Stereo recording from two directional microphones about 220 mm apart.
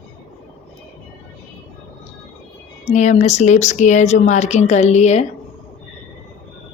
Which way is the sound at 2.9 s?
30° left (ahead or behind).